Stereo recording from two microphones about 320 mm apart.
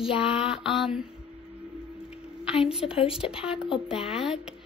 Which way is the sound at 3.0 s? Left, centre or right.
Centre.